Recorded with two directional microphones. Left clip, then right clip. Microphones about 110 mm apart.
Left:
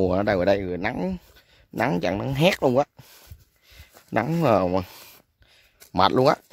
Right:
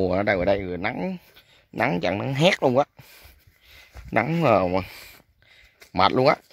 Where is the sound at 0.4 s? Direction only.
55° left (ahead or behind); by 2.6 s 25° left (ahead or behind).